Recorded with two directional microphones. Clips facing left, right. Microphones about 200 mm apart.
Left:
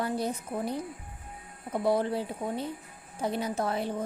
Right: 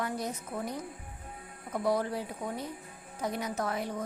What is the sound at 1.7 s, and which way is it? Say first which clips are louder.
A woman's voice: left 3 dB; 30° left (ahead or behind).